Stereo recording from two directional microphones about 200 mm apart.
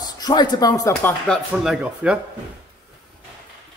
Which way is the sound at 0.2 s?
20° left (ahead or behind).